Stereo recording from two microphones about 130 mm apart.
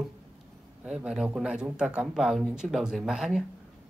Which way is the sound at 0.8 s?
5° right (ahead or behind).